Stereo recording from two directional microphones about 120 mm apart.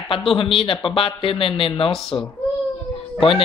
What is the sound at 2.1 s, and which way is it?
Speech, 35° left (ahead or behind).